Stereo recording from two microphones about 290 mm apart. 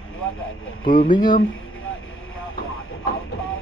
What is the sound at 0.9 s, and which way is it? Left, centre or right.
Speech, left.